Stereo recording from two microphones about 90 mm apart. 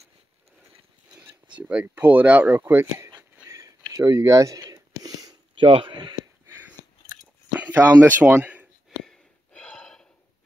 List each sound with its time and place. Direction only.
1.1 s speech: 15° right (ahead or behind)
3.4 s a sound: 35° right (ahead or behind)
5.6 s speech: 75° right (ahead or behind)
7.6 s speech: 20° right (ahead or behind)
9.0 s gasp: 5° left (ahead or behind)